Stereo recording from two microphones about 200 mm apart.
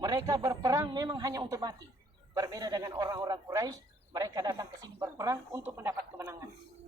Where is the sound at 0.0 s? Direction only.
15° right (ahead or behind).